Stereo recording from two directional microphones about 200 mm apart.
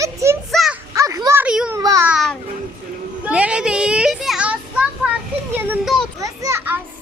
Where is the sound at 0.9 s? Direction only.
15° right (ahead or behind).